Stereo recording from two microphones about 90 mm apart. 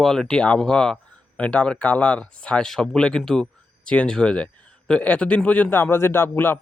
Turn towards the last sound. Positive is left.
turn(degrees=25)  # may be behind; listen again after turning